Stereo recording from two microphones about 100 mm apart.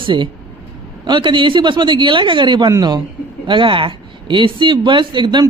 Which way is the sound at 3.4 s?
55° right (ahead or behind).